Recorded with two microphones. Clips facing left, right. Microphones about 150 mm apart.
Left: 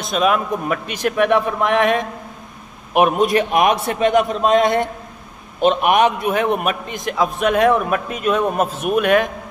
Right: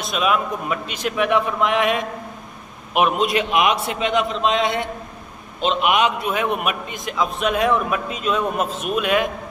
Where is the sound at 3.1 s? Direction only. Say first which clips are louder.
Left 4 dB; 45° left (ahead or behind).